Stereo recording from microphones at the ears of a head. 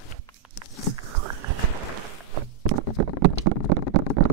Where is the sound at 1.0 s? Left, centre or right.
Right.